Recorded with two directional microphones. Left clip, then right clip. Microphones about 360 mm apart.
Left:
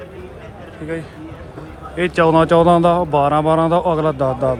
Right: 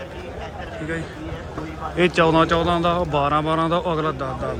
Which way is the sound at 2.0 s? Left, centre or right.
Centre.